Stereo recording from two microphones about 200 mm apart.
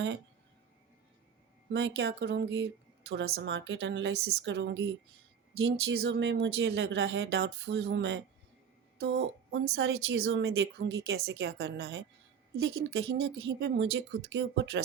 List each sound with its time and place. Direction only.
1.7 s speech: 60° right (ahead or behind)
3.1 s speech: 75° right (ahead or behind)
11.0 s speech: 55° right (ahead or behind)